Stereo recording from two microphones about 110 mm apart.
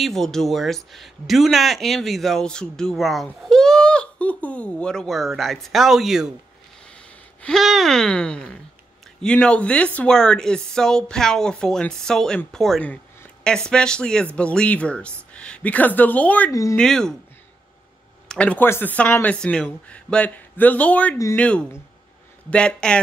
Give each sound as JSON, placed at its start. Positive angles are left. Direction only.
{"t": 0.0, "sound": "speech", "side_deg": 5}
{"t": 7.4, "sound": "speech", "side_deg": 0}
{"t": 12.8, "sound": "a sound", "side_deg": 10}
{"t": 13.7, "sound": "speech", "side_deg": 10}
{"t": 18.3, "sound": "speech", "side_deg": 10}